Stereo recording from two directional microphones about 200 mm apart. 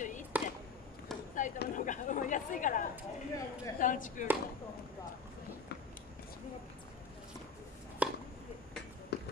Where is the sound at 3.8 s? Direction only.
40° left (ahead or behind).